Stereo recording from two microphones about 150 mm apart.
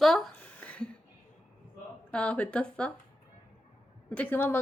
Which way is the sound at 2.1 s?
10° left (ahead or behind).